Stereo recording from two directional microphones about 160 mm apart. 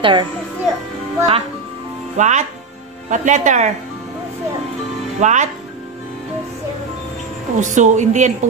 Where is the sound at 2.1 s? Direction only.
50° right (ahead or behind).